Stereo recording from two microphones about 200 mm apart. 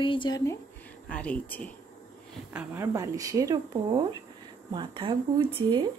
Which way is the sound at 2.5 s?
10° right (ahead or behind).